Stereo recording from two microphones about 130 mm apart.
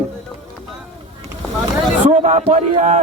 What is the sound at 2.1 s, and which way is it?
Speech, 60° right (ahead or behind).